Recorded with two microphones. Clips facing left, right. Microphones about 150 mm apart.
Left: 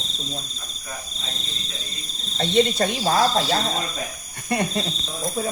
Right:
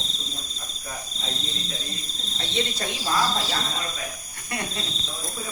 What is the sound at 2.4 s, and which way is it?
Speech, 60° left (ahead or behind).